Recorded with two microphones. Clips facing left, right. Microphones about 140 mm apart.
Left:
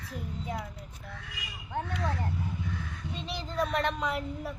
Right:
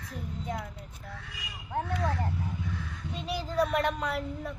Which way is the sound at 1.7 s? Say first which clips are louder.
Right 2 dB; centre (ahead or behind).